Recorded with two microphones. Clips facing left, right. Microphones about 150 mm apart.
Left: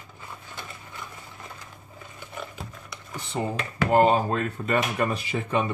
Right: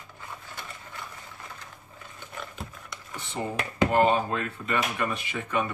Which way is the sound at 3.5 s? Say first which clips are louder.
Right 2 dB; 20° right (ahead or behind).